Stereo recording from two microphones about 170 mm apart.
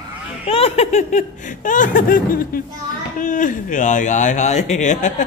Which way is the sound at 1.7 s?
50° left (ahead or behind).